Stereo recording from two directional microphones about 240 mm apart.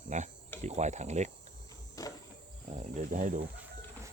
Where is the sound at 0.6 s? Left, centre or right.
Right.